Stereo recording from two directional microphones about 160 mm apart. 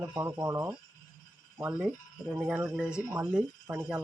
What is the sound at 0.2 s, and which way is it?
Speech, 15° right (ahead or behind).